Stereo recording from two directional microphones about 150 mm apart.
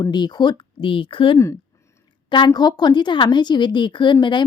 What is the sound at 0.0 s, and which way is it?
A woman's voice, 30° left (ahead or behind).